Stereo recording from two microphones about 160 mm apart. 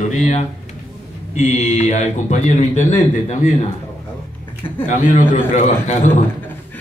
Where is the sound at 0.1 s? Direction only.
50° left (ahead or behind).